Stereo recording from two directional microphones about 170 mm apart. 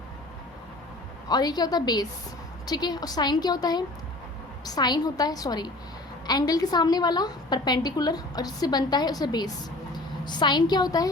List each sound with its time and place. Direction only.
1.3 s a woman's voice: 25° left (ahead or behind)